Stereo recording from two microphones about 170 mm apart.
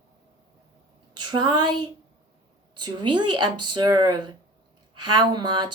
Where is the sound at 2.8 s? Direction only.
25° right (ahead or behind).